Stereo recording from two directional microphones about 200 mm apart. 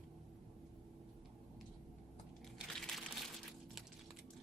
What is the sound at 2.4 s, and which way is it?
Crushing, centre (ahead or behind).